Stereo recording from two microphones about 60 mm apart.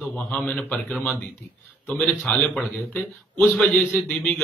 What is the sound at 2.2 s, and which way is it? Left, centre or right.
A man's voice, left.